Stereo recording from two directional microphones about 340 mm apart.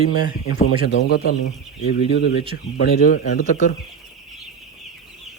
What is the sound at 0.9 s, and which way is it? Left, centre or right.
Speech, left.